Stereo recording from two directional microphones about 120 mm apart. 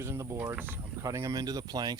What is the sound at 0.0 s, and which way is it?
Speech, 25° right (ahead or behind).